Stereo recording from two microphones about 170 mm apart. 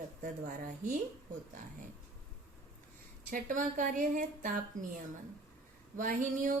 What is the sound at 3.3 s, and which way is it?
Speech, 50° right (ahead or behind).